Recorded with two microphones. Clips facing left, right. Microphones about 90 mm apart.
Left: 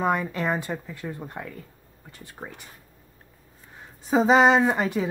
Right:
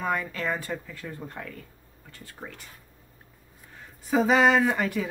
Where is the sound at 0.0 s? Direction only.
20° left (ahead or behind).